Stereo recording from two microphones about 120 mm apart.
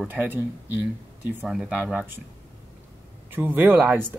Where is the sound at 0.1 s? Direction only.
15° right (ahead or behind).